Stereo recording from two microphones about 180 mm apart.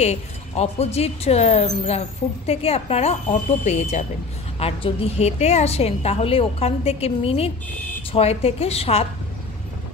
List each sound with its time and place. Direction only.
0.0 s speech: 35° left (ahead or behind)